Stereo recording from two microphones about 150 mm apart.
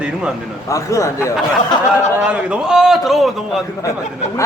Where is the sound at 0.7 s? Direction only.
20° left (ahead or behind).